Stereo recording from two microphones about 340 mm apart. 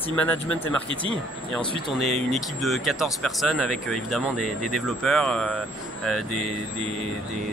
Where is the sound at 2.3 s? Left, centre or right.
Centre.